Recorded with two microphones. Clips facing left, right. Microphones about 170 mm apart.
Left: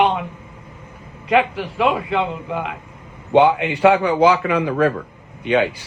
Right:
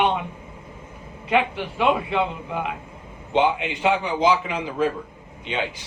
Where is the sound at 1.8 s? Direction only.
Centre (ahead or behind).